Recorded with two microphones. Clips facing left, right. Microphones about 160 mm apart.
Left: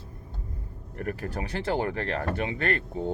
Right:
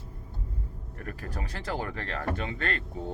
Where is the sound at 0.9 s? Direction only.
50° left (ahead or behind).